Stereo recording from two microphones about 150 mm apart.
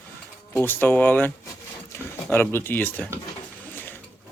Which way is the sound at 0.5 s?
15° left (ahead or behind).